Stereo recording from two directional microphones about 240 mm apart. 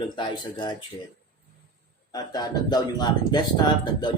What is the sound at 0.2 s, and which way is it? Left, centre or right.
Speech, centre.